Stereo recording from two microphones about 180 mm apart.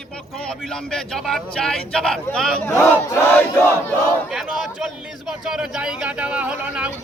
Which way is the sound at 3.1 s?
10° left (ahead or behind).